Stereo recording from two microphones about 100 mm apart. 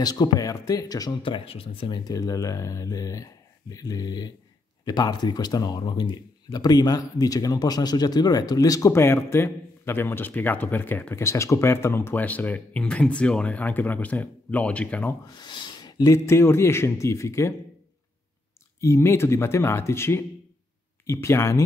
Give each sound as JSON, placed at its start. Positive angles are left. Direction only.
{"t": 0.0, "sound": "speech", "side_deg": 45}
{"t": 1.2, "sound": "speech", "side_deg": 65}
{"t": 2.0, "sound": "a man's voice", "side_deg": 35}
{"t": 15.2, "sound": "speech", "side_deg": 45}
{"t": 16.3, "sound": "speech", "side_deg": 25}
{"t": 18.8, "sound": "speech", "side_deg": 30}